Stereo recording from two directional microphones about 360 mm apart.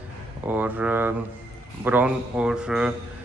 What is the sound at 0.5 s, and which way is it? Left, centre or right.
A man's voice, centre.